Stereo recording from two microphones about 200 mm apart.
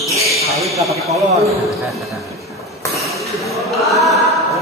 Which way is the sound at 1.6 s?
Centre (ahead or behind).